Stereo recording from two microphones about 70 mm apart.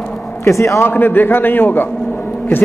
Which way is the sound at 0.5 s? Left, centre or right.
Left.